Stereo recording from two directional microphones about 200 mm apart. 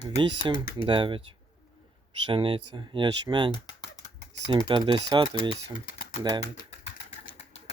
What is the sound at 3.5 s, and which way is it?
Typing, 20° left (ahead or behind).